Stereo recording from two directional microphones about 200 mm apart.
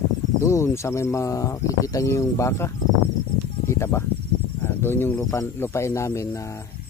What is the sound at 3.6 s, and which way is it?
Cricket, 15° left (ahead or behind).